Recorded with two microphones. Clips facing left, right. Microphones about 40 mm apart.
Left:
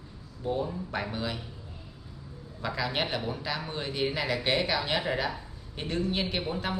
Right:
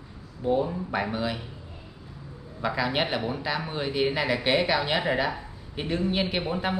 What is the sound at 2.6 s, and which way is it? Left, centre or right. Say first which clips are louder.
Speech: right 4 dB; centre.